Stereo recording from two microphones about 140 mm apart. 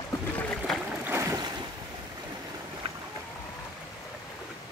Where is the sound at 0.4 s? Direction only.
10° left (ahead or behind).